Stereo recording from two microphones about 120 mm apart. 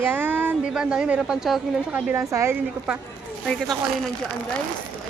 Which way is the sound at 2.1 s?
25° right (ahead or behind).